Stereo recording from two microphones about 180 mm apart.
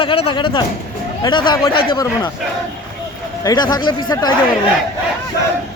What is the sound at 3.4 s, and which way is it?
Speech, 20° left (ahead or behind).